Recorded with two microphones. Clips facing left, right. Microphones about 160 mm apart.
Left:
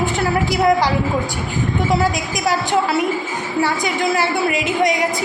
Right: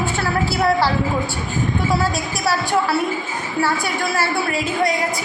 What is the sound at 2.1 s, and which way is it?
A woman's voice, 15° left (ahead or behind).